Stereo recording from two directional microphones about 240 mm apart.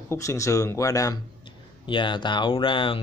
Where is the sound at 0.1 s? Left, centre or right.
Centre.